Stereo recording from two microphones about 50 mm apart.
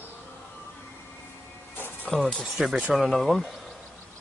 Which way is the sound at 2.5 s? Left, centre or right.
Centre.